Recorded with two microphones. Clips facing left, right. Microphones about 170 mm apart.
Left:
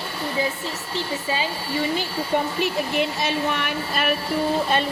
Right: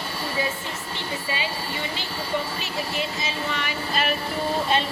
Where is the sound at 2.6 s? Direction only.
60° left (ahead or behind).